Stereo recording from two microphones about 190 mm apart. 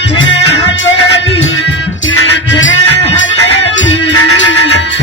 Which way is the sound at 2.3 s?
75° left (ahead or behind).